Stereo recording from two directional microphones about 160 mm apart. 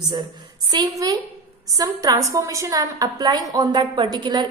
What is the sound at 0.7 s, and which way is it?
A woman's voice, 25° right (ahead or behind).